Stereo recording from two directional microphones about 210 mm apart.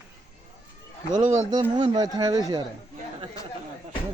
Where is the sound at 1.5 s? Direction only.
20° right (ahead or behind).